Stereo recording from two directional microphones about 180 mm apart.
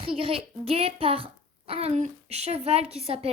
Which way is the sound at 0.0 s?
30° right (ahead or behind).